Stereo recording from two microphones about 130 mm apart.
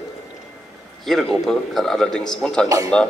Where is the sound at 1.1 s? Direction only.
5° left (ahead or behind).